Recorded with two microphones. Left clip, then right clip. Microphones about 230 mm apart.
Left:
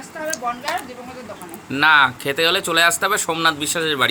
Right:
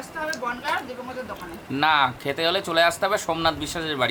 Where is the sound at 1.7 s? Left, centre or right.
Centre.